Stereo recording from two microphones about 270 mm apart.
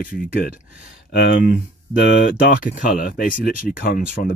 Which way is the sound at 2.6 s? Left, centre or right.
Left.